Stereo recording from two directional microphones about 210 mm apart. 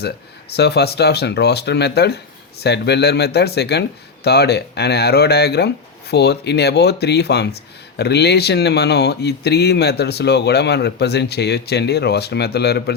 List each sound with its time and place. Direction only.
0.5 s speech: 50° left (ahead or behind)